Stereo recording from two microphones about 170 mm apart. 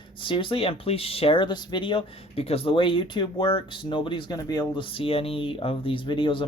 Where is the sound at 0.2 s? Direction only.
30° left (ahead or behind).